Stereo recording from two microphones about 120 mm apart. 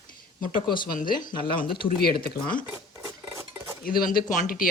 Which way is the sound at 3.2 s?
20° right (ahead or behind).